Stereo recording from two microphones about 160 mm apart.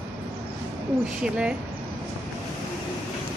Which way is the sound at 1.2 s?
5° right (ahead or behind).